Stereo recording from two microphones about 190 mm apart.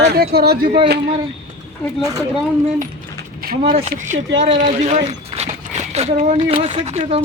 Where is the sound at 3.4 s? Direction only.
50° right (ahead or behind).